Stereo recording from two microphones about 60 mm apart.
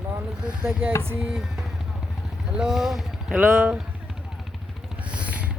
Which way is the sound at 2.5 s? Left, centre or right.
Centre.